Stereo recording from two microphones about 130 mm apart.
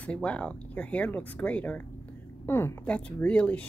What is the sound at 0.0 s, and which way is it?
A woman's voice, 10° left (ahead or behind).